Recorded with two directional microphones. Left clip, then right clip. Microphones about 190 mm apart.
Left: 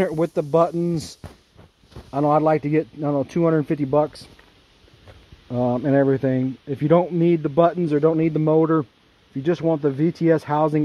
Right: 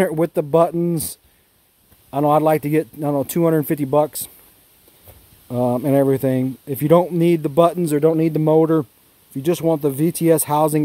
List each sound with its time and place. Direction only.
0.0 s speech: 35° right (ahead or behind)
5.5 s speech: 25° right (ahead or behind)